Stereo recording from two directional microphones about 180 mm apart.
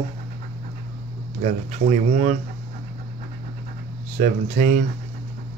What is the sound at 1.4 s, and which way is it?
Speech, 45° right (ahead or behind).